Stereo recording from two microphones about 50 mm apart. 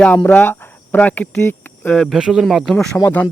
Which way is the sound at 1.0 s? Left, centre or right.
Left.